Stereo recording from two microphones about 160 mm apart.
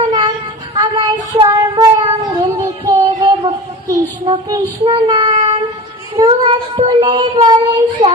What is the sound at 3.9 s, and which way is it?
Child singing, 20° right (ahead or behind).